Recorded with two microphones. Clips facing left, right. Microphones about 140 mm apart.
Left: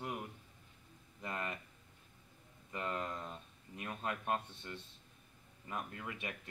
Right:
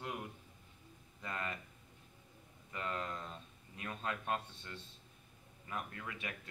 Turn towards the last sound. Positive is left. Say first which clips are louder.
# left 1 dB
turn(degrees=20)  # may be behind; listen again after turning